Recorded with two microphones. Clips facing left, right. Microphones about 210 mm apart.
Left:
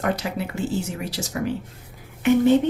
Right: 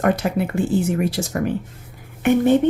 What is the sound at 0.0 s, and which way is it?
Speech, 55° right (ahead or behind).